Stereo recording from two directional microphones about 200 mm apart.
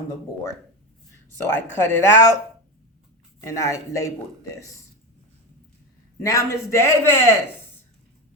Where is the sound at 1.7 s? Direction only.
10° left (ahead or behind).